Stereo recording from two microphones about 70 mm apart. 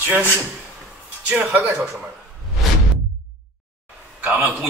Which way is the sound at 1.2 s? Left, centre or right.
Centre.